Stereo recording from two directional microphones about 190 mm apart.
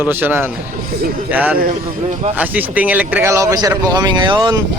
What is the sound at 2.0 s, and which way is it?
Speech, 35° right (ahead or behind).